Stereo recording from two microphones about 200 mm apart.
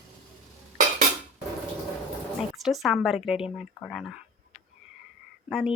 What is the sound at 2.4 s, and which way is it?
A woman's voice, centre (ahead or behind).